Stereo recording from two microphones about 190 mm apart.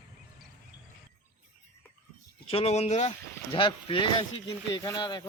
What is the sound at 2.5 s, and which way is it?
Speech, 30° left (ahead or behind).